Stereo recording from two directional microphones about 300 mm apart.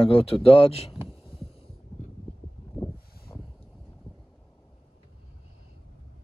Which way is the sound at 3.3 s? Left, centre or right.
Centre.